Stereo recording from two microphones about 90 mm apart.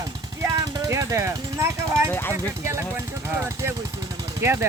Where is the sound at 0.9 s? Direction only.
35° right (ahead or behind).